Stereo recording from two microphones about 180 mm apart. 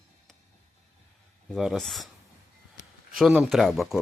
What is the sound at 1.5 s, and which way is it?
Speech, centre (ahead or behind).